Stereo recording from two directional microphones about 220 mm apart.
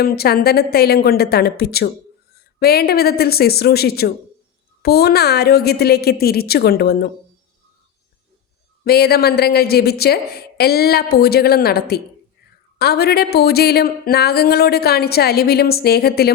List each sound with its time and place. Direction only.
0.0 s speech: 45° left (ahead or behind)
8.8 s speech: 45° left (ahead or behind)